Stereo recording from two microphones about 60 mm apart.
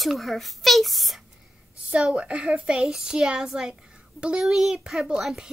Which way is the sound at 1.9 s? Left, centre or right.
Centre.